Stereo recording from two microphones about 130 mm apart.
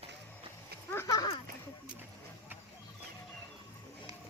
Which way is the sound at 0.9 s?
25° left (ahead or behind).